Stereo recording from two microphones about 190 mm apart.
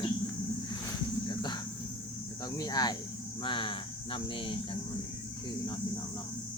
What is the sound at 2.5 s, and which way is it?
Speech, 20° left (ahead or behind).